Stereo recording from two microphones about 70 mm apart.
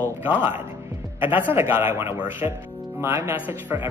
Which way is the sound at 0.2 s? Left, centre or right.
Right.